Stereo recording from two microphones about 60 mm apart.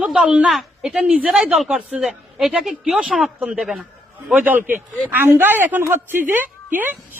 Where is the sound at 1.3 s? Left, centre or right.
Centre.